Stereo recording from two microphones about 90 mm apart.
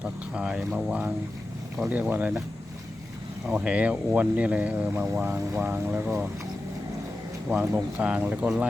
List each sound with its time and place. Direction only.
0.0 s speech: 10° right (ahead or behind)
1.9 s speech: 20° right (ahead or behind)
3.4 s speech: 10° right (ahead or behind)
7.5 s speech: 25° right (ahead or behind)
7.9 s speech: 15° right (ahead or behind)